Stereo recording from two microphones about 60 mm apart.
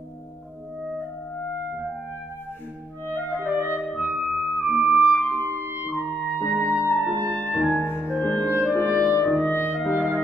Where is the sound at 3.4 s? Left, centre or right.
Right.